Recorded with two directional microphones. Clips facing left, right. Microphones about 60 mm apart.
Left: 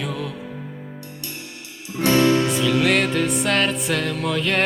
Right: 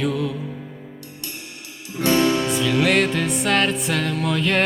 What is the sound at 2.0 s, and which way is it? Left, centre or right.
Music, right.